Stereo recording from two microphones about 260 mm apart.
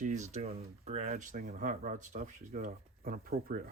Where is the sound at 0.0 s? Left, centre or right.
Right.